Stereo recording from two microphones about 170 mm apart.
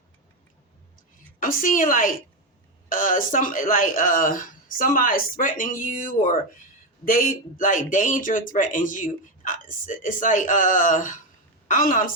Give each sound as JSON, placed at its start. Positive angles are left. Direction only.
{"t": 1.4, "sound": "speech", "side_deg": 50}